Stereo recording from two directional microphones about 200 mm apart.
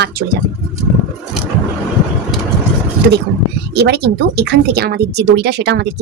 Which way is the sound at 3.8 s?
55° right (ahead or behind).